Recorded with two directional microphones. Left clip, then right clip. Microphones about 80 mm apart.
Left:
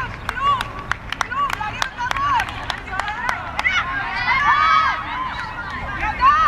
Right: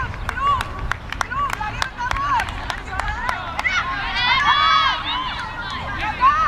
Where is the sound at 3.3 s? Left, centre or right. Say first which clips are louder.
Even; centre.